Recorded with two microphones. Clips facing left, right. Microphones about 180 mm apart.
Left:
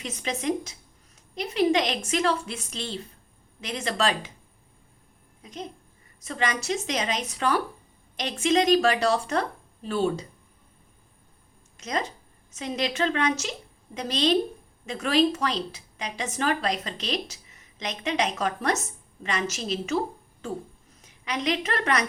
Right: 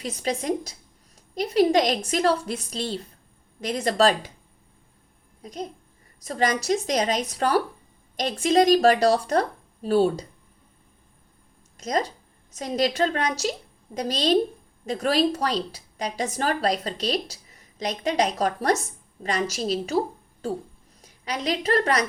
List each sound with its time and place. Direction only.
0.0 s a woman's voice: 35° right (ahead or behind)
5.4 s a child's voice: 40° right (ahead or behind)
11.8 s a woman's voice: 35° right (ahead or behind)
21.0 s a woman's voice: 35° right (ahead or behind)